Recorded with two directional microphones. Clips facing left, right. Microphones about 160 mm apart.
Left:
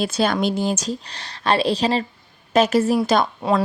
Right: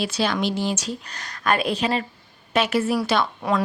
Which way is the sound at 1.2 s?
30° left (ahead or behind).